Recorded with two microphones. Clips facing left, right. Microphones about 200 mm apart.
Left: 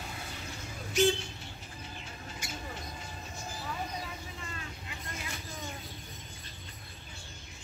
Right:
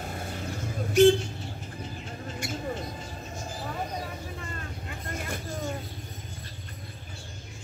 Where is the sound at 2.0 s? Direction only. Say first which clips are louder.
Right 8 dB; 50° right (ahead or behind).